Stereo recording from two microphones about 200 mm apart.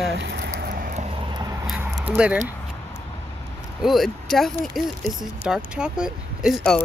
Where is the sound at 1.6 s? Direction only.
5° right (ahead or behind).